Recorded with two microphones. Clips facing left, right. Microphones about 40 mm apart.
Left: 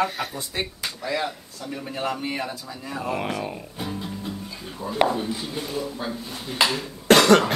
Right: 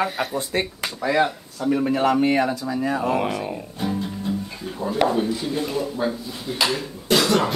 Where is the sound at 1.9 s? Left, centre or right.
Right.